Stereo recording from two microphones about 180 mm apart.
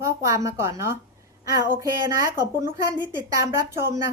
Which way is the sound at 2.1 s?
20° right (ahead or behind).